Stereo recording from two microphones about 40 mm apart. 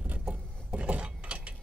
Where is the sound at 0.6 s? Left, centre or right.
Right.